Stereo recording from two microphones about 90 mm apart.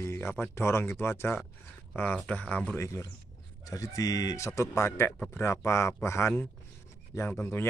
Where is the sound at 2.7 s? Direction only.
35° left (ahead or behind).